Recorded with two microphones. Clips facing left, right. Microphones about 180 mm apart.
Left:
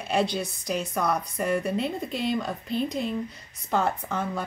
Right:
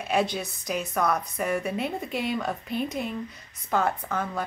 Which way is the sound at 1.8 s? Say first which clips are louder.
Left 1 dB; 60° right (ahead or behind).